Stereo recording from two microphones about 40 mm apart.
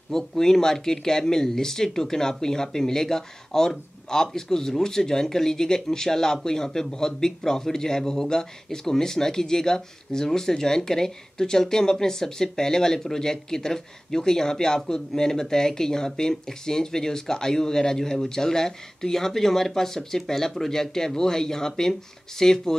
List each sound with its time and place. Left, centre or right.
0.1 s speech: centre